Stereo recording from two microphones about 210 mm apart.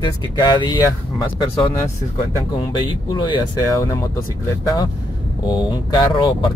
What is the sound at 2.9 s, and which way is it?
Speech, 20° left (ahead or behind).